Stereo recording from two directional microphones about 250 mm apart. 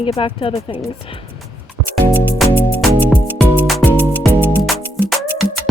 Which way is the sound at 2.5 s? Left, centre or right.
Centre.